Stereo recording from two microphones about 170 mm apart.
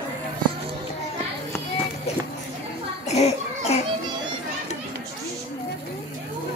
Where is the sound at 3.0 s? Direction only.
40° left (ahead or behind).